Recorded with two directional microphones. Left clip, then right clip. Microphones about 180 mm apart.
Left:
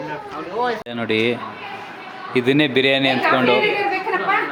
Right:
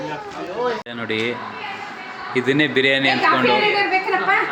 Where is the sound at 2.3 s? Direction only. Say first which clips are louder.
Left 1 dB; 25° left (ahead or behind).